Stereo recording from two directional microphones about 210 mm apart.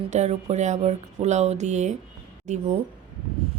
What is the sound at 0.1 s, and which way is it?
Speech, 30° right (ahead or behind).